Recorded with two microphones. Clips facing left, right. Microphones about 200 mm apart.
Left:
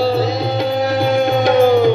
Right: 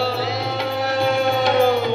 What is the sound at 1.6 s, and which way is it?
Music, 45° left (ahead or behind).